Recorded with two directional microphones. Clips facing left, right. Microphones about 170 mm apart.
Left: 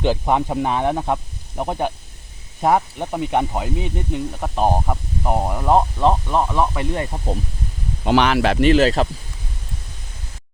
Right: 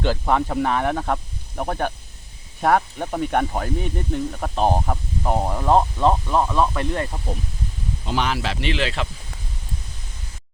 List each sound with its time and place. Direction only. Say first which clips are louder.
0.0 s speech: left 2 dB; 15° left (ahead or behind)
8.0 s speech: left 8 dB; 70° left (ahead or behind); by 9.0 s 40° left (ahead or behind)